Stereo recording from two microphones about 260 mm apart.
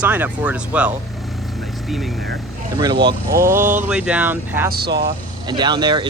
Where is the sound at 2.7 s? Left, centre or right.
Centre.